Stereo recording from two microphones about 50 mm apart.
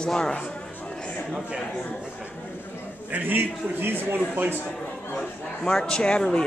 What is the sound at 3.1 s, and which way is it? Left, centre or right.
A man's voice, right.